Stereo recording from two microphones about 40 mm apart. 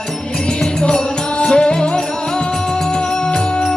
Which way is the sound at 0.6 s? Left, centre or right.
Centre.